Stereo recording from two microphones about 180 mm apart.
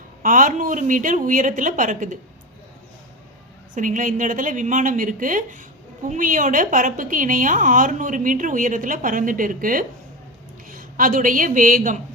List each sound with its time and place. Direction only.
0.2 s a woman's voice: 50° right (ahead or behind)
3.8 s a woman's voice: 45° right (ahead or behind)